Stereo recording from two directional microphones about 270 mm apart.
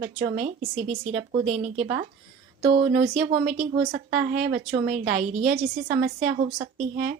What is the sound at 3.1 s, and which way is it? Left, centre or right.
Speech, right.